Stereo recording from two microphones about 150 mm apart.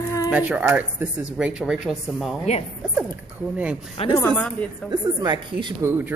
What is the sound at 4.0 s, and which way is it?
Speech, 40° left (ahead or behind).